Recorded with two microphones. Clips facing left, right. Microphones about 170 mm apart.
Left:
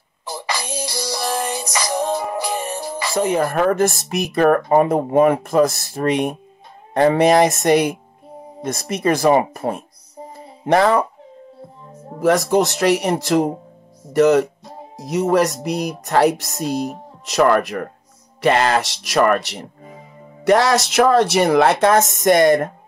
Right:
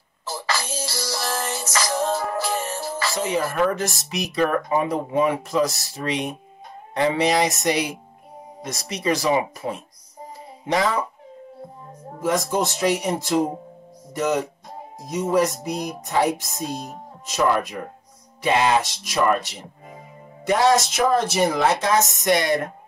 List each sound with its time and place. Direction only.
0.2 s music: 15° left (ahead or behind)
3.2 s speech: 50° left (ahead or behind)
12.2 s speech: 70° left (ahead or behind); by 22.6 s 50° left (ahead or behind)